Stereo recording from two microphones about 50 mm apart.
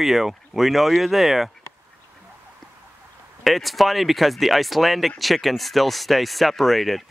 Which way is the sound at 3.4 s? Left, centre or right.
Centre.